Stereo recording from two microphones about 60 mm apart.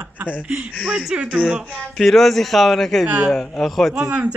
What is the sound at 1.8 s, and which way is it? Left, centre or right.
Speech, centre.